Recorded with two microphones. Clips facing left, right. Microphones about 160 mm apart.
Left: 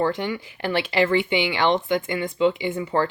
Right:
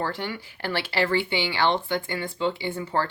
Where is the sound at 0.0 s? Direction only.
20° left (ahead or behind).